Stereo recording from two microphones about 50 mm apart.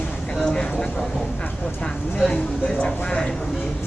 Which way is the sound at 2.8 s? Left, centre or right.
Centre.